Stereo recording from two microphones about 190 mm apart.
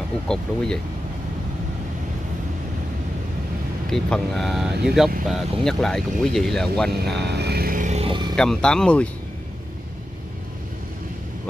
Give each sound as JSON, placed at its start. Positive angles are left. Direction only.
{"t": 0.3, "sound": "speech", "side_deg": 5}
{"t": 3.9, "sound": "speech", "side_deg": 0}
{"t": 6.9, "sound": "vehicle", "side_deg": -60}
{"t": 8.4, "sound": "speech", "side_deg": 5}